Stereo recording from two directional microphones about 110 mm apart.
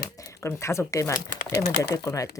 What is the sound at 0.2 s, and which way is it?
Speech, 30° left (ahead or behind).